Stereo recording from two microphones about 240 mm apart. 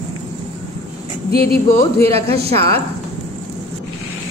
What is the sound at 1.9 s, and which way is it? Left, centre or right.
Speech, right.